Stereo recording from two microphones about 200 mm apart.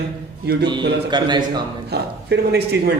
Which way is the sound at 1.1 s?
20° right (ahead or behind).